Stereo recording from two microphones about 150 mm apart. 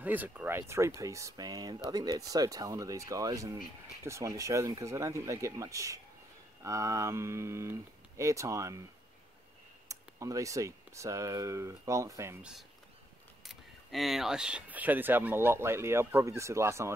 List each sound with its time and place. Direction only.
0.0 s speech: 10° right (ahead or behind)
9.8 s speech: 20° right (ahead or behind)
12.4 s speech: 5° right (ahead or behind)